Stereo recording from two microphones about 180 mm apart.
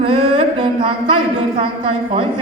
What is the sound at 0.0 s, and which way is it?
Mantra, 30° right (ahead or behind).